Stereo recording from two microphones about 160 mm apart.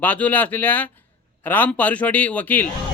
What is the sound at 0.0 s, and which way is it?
Speech, 10° left (ahead or behind).